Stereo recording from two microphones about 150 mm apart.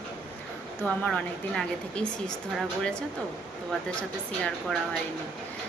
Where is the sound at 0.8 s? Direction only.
10° left (ahead or behind).